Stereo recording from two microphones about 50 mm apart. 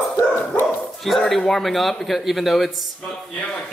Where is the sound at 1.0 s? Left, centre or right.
Centre.